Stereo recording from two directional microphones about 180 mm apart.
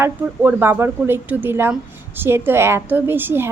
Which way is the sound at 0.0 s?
10° right (ahead or behind).